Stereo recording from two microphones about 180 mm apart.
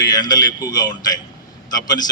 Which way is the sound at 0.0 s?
20° left (ahead or behind).